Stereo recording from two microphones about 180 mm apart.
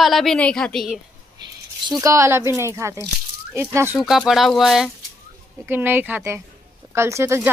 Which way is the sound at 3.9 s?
5° right (ahead or behind).